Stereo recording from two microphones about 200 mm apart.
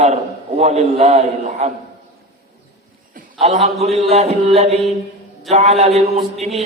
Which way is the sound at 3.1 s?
35° right (ahead or behind).